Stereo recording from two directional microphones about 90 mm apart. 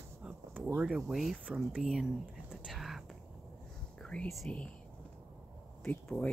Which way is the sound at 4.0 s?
10° left (ahead or behind).